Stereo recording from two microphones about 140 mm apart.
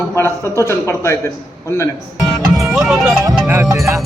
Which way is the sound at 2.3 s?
Centre (ahead or behind).